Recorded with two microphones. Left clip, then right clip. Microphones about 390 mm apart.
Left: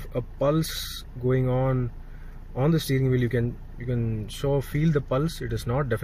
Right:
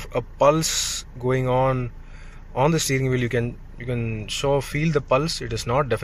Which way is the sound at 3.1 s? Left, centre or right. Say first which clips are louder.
Right 2 dB; right.